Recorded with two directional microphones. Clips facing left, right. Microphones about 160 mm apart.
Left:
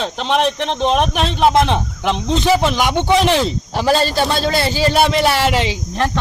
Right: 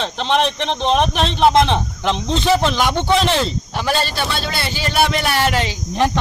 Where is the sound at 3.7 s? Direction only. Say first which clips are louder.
Left 7 dB; 35° left (ahead or behind).